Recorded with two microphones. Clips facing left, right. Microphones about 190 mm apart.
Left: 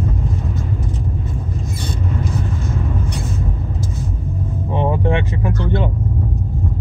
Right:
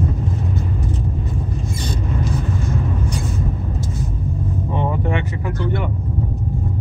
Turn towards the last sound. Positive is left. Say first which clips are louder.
# left 3 dB
turn(degrees=25)  # may be behind; listen again after turning